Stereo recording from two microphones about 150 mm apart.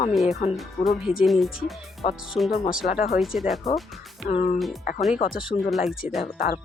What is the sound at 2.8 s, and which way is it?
Speech, 60° left (ahead or behind).